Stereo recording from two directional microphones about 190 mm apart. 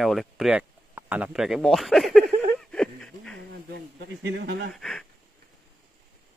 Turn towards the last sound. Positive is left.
turn(degrees=0)  # may be behind; listen again after turning